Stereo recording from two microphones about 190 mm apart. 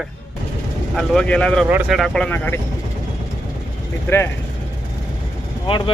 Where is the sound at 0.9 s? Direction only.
5° left (ahead or behind).